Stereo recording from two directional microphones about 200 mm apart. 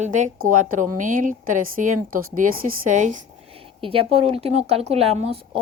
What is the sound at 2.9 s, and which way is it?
Speech, 40° right (ahead or behind).